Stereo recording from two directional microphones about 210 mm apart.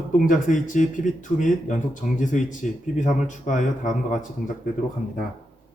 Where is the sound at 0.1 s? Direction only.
35° left (ahead or behind).